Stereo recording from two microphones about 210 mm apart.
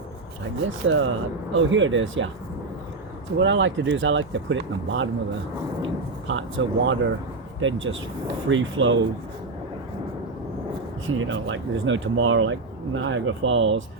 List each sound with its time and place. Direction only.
0.9 s speech: 70° right (ahead or behind)
3.3 s speech: 60° right (ahead or behind)
6.2 s speech: 65° right (ahead or behind)
11.0 s speech: 70° right (ahead or behind)